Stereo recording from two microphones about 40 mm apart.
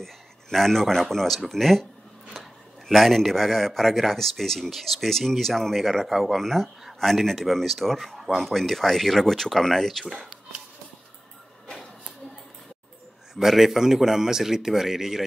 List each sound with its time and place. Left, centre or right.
0.0 s speech: centre
2.9 s speech: centre
11.6 s a sound: centre
13.3 s a man's voice: centre